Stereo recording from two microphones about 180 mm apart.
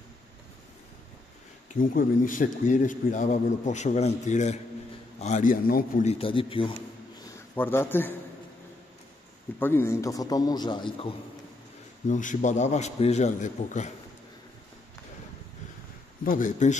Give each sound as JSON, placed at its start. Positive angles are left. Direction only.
{"t": 1.8, "sound": "a man's voice", "side_deg": 50}
{"t": 6.0, "sound": "a man's voice", "side_deg": 30}
{"t": 7.5, "sound": "a man's voice", "side_deg": 10}
{"t": 9.6, "sound": "a man's voice", "side_deg": 15}
{"t": 12.1, "sound": "a man's voice", "side_deg": 45}
{"t": 16.3, "sound": "a man's voice", "side_deg": 45}